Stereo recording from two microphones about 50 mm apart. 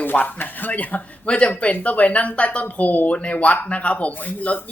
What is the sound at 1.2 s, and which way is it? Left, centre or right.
A man's voice, left.